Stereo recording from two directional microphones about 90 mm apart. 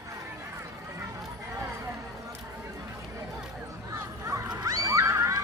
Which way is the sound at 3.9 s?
35° right (ahead or behind).